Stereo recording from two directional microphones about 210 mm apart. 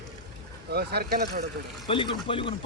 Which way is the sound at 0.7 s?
50° right (ahead or behind).